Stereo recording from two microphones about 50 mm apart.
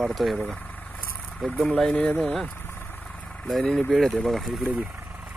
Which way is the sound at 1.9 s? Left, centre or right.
Left.